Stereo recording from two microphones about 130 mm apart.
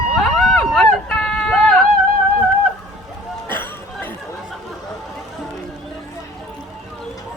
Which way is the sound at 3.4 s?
15° left (ahead or behind).